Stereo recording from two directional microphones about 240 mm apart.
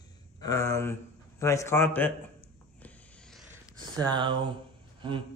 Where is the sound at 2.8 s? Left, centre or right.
Centre.